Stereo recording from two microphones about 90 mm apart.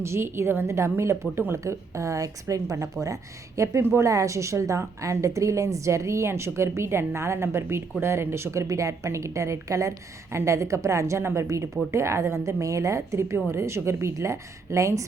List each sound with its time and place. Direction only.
0.0 s a woman's voice: 30° right (ahead or behind)